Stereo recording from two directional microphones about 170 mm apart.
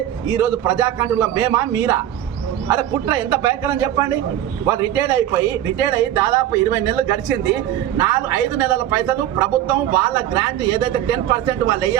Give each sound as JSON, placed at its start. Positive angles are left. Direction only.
{"t": 0.3, "sound": "a man's voice", "side_deg": -10}